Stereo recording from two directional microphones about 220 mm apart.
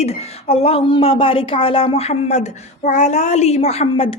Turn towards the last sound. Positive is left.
turn(degrees=25)  # may be behind; listen again after turning